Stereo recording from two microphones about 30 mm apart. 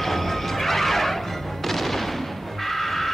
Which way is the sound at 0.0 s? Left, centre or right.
Centre.